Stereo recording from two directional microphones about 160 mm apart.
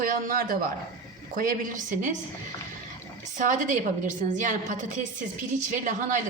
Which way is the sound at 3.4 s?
55° right (ahead or behind).